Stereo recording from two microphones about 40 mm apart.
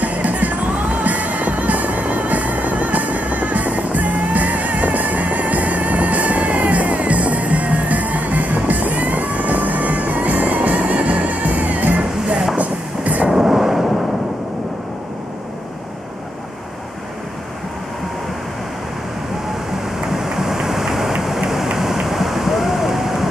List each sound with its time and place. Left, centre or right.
0.0 s music: right
12.5 s train: right
13.3 s train: centre
20.1 s vehicle: centre
21.2 s rain: centre
21.7 s a sound: centre